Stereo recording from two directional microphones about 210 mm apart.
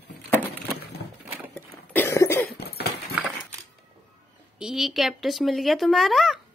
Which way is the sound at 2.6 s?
50° left (ahead or behind).